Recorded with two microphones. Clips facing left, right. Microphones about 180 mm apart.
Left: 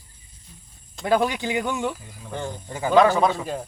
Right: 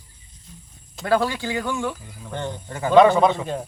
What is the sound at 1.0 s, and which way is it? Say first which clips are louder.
Speech: even; 15° left (ahead or behind).